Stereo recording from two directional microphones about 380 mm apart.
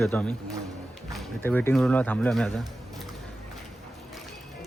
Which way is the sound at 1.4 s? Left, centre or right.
Centre.